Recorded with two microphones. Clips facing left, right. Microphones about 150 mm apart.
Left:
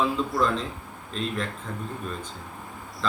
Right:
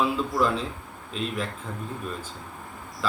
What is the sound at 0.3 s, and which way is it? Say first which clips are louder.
Speech: right 1 dB; 5° right (ahead or behind).